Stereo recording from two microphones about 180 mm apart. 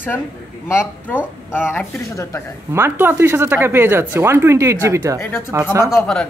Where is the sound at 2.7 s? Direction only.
15° right (ahead or behind).